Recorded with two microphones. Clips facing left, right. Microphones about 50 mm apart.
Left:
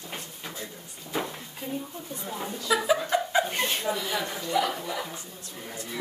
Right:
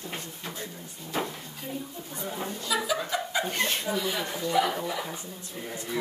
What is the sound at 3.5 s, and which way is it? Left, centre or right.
Speech, centre.